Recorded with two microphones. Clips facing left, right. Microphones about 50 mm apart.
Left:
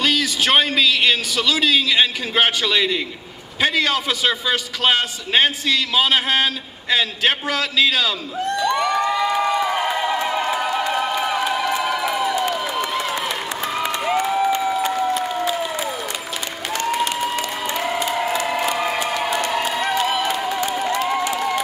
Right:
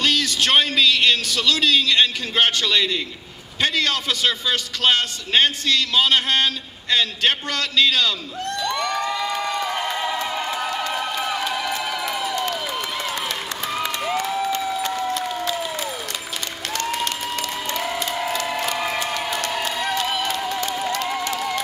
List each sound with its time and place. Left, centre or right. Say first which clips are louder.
0.0 s a man's voice: left 1 dB; centre
3.6 s a sound: left 3 dB; centre
16.7 s applause: left 4 dB; centre